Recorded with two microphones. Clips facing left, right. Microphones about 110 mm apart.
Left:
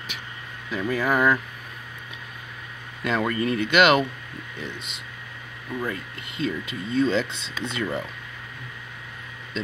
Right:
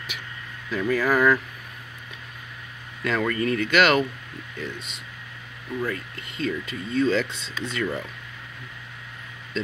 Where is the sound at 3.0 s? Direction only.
15° left (ahead or behind).